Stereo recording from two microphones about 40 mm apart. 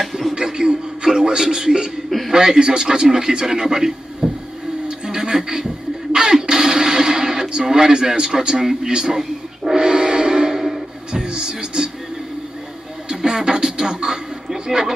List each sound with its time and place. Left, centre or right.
0.0 s music: centre
0.3 s music: centre
2.0 s a sound: centre
2.3 s a man's voice: centre
4.8 s television: centre
6.1 s a sound: centre
9.7 s music: centre
11.1 s music: right
13.1 s music: centre
14.7 s a sound: centre